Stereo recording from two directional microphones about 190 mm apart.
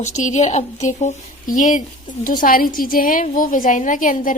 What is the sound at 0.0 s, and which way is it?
A woman's voice, 40° left (ahead or behind).